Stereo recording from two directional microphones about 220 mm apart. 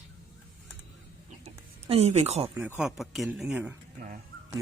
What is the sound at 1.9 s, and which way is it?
Speech, 30° right (ahead or behind).